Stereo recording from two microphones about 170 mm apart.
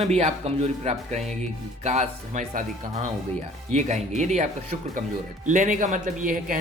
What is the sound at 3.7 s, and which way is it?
Speech, 45° right (ahead or behind).